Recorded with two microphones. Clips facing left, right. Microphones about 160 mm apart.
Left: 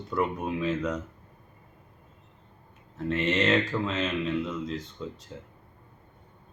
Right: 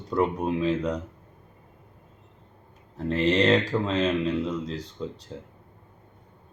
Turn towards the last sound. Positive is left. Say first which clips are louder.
# right 2 dB
turn(degrees=-35)  # may be behind; listen again after turning